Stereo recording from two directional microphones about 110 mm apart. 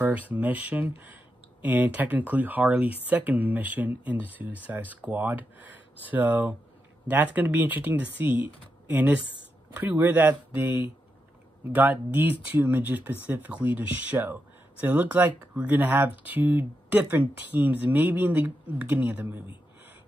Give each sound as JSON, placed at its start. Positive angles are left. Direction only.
{"t": 0.0, "sound": "speech", "side_deg": -15}